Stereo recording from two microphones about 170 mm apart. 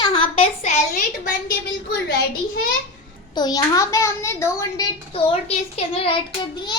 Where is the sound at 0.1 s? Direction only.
35° left (ahead or behind).